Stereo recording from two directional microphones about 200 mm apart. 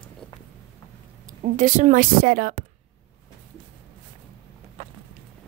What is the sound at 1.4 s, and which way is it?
A woman's voice, 40° right (ahead or behind).